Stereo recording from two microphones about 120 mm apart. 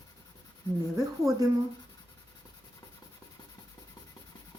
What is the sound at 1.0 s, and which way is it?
Speech, 25° right (ahead or behind).